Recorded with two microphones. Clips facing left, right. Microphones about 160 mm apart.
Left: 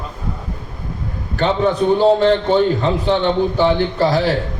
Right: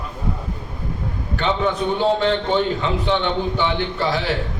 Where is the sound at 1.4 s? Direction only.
40° left (ahead or behind).